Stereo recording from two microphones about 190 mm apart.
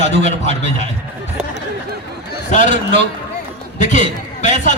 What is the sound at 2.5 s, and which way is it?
A man's voice, 40° left (ahead or behind).